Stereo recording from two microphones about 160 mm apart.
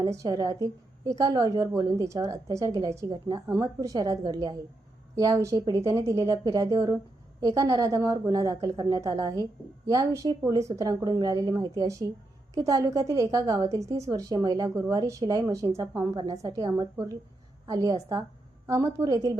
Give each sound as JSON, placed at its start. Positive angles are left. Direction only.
{"t": 0.0, "sound": "a woman's voice", "side_deg": -25}